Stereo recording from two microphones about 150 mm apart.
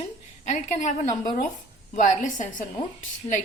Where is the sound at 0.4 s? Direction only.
55° left (ahead or behind).